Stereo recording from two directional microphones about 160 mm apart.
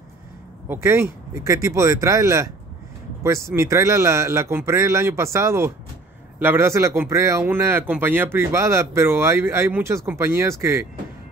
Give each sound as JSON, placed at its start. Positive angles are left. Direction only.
{"t": 0.7, "sound": "speech", "side_deg": -15}
{"t": 3.5, "sound": "speech", "side_deg": -20}